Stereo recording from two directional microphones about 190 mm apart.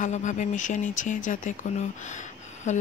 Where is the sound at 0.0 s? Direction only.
40° left (ahead or behind).